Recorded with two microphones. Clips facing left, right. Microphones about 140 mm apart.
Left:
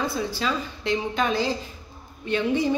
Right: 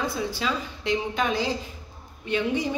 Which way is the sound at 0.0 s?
15° right (ahead or behind).